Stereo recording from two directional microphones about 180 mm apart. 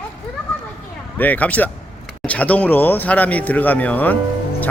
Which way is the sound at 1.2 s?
10° left (ahead or behind).